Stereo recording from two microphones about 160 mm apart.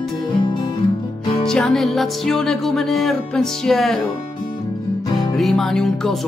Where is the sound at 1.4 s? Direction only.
5° left (ahead or behind).